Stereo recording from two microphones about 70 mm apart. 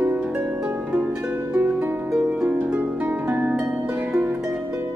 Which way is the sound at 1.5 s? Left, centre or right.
Right.